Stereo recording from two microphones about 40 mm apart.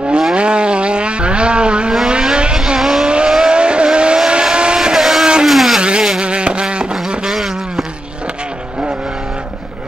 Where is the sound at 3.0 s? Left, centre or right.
Right.